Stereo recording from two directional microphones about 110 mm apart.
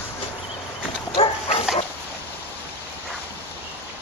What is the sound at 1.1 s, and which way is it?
Dog, 60° left (ahead or behind).